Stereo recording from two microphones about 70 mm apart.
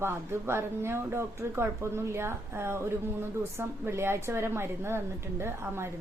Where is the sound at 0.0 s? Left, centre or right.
Right.